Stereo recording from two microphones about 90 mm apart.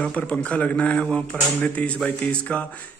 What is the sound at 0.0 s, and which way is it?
Speech, 10° left (ahead or behind).